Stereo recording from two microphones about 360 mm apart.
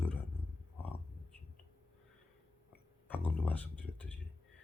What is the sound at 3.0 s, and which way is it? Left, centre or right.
Speech, centre.